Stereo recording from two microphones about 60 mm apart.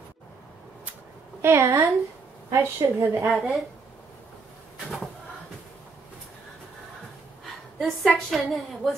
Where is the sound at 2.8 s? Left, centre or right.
Right.